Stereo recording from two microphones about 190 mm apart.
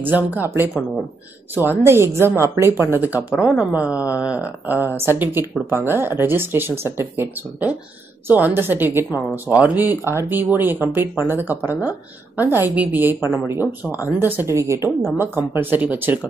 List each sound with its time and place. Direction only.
0.0 s a woman's voice: 10° right (ahead or behind)